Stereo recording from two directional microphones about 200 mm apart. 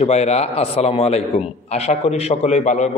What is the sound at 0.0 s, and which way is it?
A man's voice, 30° left (ahead or behind).